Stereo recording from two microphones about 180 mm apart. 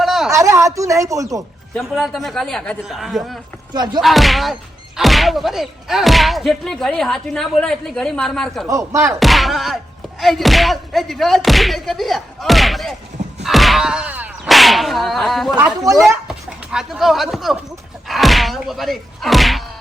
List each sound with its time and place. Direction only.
0.0 s a sound: centre (ahead or behind)
0.3 s a woman's voice: 15° right (ahead or behind)
1.7 s speech: centre (ahead or behind)
8.6 s speech: 20° right (ahead or behind)
9.1 s speech: centre (ahead or behind)
13.4 s whip: centre (ahead or behind)
16.0 s speech: centre (ahead or behind)